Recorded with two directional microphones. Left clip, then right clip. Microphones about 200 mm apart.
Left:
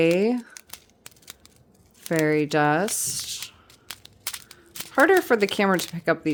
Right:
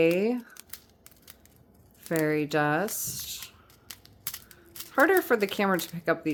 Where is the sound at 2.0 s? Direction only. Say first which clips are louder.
Left 5 dB; 25° left (ahead or behind).